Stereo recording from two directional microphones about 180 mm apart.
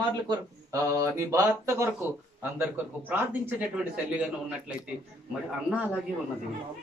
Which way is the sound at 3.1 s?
10° right (ahead or behind).